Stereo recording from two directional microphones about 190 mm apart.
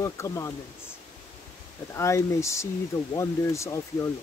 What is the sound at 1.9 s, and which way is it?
Speech, 15° left (ahead or behind).